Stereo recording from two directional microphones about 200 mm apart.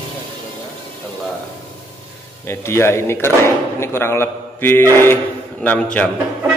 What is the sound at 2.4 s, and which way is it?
A man's voice, 10° left (ahead or behind).